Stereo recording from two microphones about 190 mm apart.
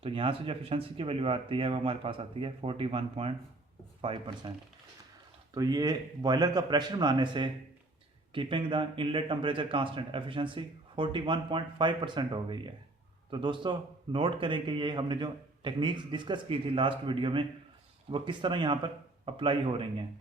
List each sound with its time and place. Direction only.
0.0 s speech: 30° right (ahead or behind)
5.5 s speech: 20° right (ahead or behind)